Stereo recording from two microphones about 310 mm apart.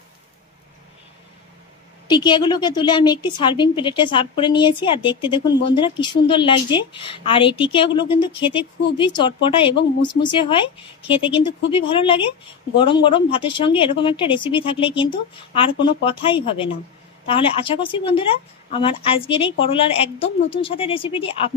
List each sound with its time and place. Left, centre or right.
2.0 s a woman's voice: centre